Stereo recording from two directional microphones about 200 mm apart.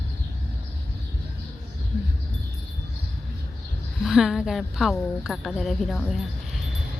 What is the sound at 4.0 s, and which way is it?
Speech, centre (ahead or behind).